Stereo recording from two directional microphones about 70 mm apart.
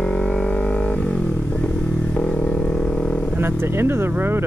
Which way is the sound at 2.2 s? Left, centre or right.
Centre.